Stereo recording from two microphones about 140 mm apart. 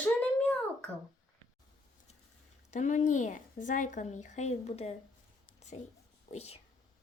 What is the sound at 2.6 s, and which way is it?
Speech, 60° left (ahead or behind).